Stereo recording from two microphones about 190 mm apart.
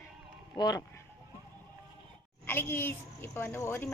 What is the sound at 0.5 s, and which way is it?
Speech, 20° left (ahead or behind).